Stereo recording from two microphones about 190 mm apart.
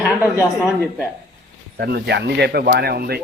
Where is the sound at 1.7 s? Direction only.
60° right (ahead or behind).